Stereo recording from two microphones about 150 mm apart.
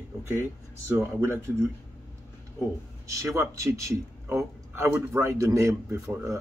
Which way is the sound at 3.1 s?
20° right (ahead or behind).